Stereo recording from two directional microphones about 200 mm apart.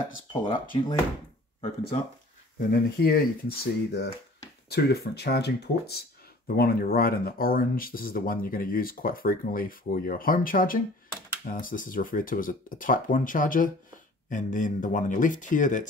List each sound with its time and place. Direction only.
0.3 s speech: 25° left (ahead or behind)
2.7 s speech: 50° left (ahead or behind)